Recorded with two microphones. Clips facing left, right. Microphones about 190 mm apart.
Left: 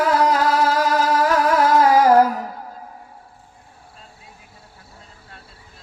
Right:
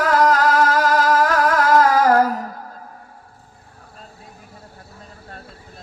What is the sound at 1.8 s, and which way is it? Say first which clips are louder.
Music: left 2 dB; 10° left (ahead or behind).